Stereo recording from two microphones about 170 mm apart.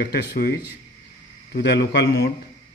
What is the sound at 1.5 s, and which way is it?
Speech, 75° left (ahead or behind).